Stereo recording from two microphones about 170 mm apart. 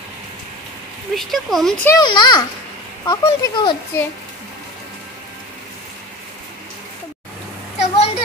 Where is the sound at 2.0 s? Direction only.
25° left (ahead or behind).